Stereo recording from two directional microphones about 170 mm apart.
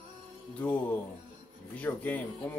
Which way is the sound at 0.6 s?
10° left (ahead or behind).